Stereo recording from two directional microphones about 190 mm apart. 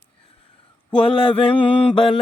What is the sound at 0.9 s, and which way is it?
Mantra, 30° left (ahead or behind).